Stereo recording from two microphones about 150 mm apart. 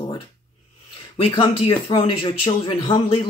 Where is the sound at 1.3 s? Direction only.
35° left (ahead or behind).